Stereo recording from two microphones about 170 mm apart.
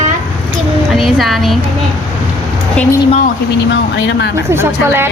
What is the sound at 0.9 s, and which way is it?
Speech, centre (ahead or behind).